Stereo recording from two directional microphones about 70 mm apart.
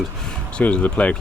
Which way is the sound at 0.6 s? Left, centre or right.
Centre.